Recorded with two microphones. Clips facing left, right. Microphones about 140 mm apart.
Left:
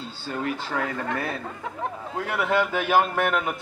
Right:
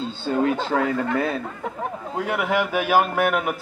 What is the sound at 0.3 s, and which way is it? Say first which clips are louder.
A man's voice: right 7 dB; 25° right (ahead or behind).